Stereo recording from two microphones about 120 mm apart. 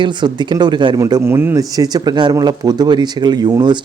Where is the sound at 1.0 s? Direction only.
25° right (ahead or behind).